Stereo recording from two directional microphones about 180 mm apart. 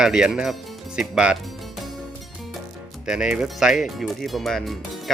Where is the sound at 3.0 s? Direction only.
5° right (ahead or behind).